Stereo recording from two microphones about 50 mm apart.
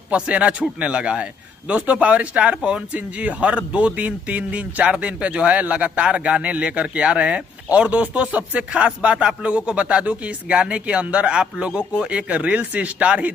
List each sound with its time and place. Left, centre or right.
0.1 s speech: right